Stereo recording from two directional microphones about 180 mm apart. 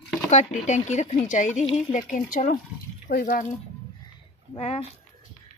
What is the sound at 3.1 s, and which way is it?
Speech, 65° left (ahead or behind).